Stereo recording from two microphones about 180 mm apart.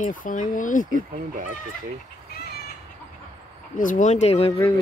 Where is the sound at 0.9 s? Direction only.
45° right (ahead or behind).